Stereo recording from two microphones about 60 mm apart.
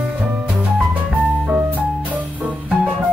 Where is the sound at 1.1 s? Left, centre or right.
Right.